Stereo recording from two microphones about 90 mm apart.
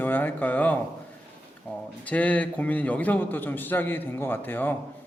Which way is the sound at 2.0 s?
15° left (ahead or behind).